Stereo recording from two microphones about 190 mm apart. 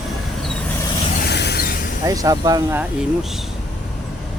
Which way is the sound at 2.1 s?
20° right (ahead or behind).